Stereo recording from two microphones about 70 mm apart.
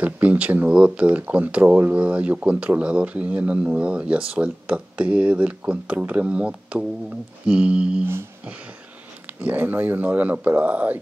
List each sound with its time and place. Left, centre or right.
0.0 s speech: right
8.0 s a sound: right
9.4 s speech: right